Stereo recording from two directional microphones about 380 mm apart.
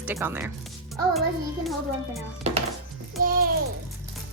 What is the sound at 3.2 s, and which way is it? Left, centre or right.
Babbling, right.